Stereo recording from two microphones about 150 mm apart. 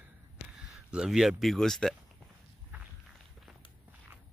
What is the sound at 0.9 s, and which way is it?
Speech, 5° right (ahead or behind).